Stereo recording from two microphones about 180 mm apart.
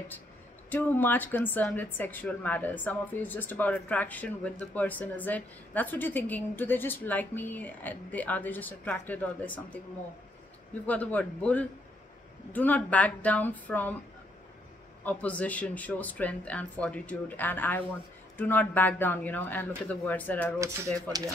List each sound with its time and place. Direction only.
0.7 s a woman's voice: 10° left (ahead or behind)
10.9 s a woman's voice: 10° left (ahead or behind)
15.0 s a woman's voice: 10° left (ahead or behind)
20.5 s speech: 15° right (ahead or behind)